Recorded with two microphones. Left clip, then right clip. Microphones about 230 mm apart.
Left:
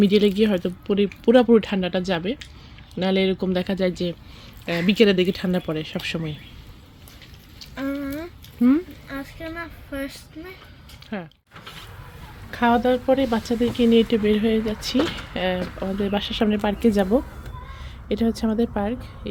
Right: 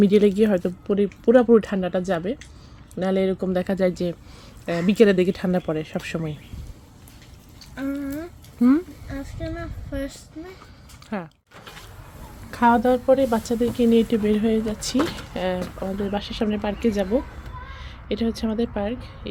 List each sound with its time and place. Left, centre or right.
0.0 s speech: centre
7.6 s a sound: centre
9.0 s speech: centre
12.5 s speech: centre
18.1 s speech: centre